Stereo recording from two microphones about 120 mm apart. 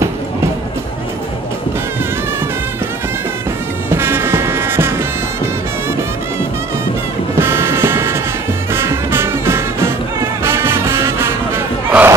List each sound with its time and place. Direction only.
3.9 s music: 20° right (ahead or behind)
7.3 s music: 20° right (ahead or behind)